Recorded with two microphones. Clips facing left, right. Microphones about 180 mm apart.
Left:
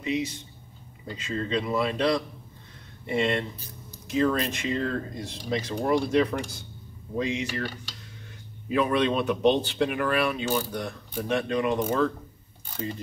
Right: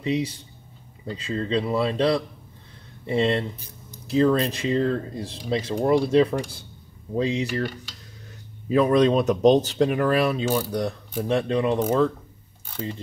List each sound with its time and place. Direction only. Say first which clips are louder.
0.0 s speech: right 3 dB; 30° right (ahead or behind)
8.6 s speech: right 6 dB; 35° right (ahead or behind)